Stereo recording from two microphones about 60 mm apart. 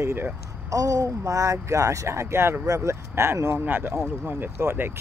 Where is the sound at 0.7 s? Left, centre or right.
Right.